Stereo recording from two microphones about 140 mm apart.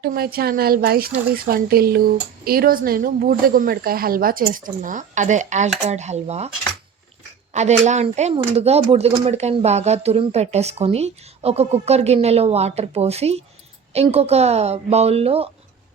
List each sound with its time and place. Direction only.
0.0 s a woman's voice: 90° right; by 6.5 s 50° right (ahead or behind)
7.5 s speech: 55° right (ahead or behind)
8.3 s a woman's voice: 45° right (ahead or behind)